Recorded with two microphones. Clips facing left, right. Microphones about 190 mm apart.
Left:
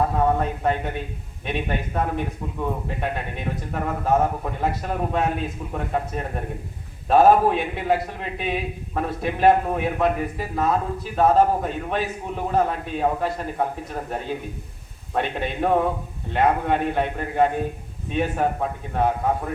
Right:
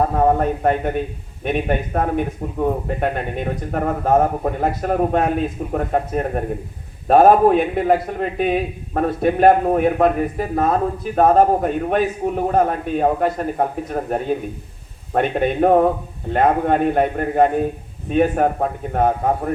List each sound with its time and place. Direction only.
0.3 s a man's voice: 50° right (ahead or behind)